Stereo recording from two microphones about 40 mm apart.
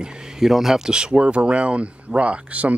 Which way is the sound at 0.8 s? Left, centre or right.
Centre.